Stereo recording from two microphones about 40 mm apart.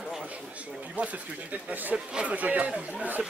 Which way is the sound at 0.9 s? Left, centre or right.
Right.